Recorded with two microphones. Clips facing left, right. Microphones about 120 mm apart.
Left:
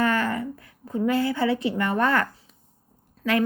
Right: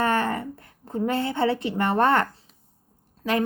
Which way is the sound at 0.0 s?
25° right (ahead or behind).